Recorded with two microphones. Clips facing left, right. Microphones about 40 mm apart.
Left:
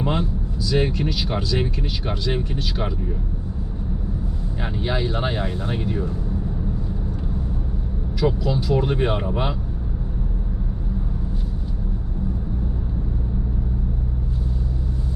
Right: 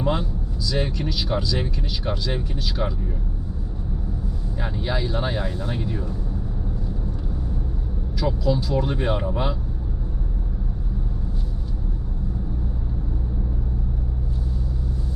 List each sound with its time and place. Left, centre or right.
0.0 s speech: left
4.6 s speech: left
8.2 s speech: left